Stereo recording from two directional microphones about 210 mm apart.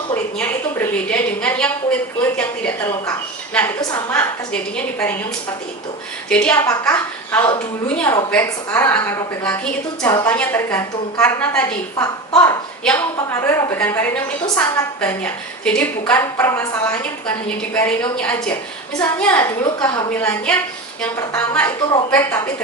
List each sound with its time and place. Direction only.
0.1 s a woman's voice: 10° left (ahead or behind)
6.2 s a woman's voice: 5° left (ahead or behind)
15.0 s a woman's voice: 5° left (ahead or behind)
19.6 s a woman's voice: 20° left (ahead or behind)
20.1 s a woman's voice: 5° left (ahead or behind)